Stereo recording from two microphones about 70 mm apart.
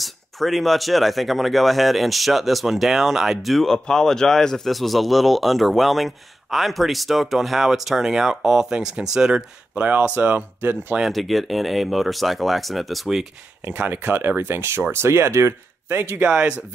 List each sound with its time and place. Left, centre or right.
0.0 s speech: centre
9.8 s speech: right
11.0 s speech: centre
13.6 s speech: right
16.0 s speech: right
16.3 s speech: centre